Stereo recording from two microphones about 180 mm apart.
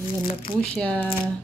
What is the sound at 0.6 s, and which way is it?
Speech, 5° left (ahead or behind).